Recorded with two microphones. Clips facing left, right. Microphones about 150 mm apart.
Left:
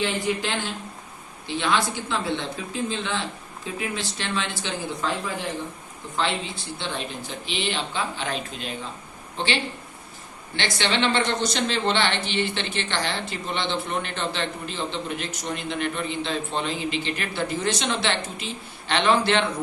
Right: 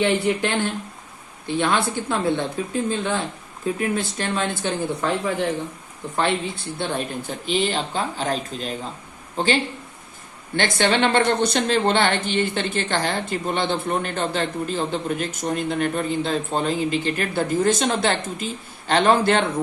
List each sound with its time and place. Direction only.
0.0 s a woman's voice: 60° right (ahead or behind)
6.7 s a woman's voice: 50° right (ahead or behind)
10.6 s a woman's voice: 50° right (ahead or behind)